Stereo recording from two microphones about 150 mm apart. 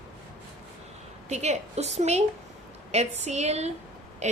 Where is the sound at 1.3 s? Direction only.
50° right (ahead or behind).